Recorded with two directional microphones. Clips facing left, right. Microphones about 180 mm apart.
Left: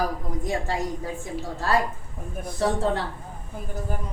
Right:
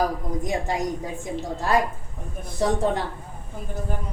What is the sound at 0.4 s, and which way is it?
A woman's voice, 20° right (ahead or behind).